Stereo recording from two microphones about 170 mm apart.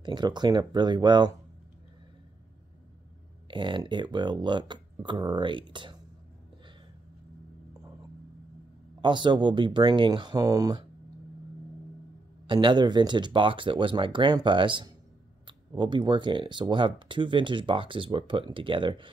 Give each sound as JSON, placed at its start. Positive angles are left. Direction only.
{"t": 0.0, "sound": "speech", "side_deg": -25}
{"t": 3.4, "sound": "speech", "side_deg": -30}
{"t": 9.0, "sound": "speech", "side_deg": -25}
{"t": 12.4, "sound": "speech", "side_deg": -25}